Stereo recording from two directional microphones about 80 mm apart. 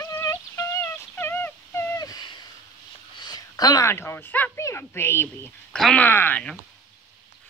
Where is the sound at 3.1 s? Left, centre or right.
Left.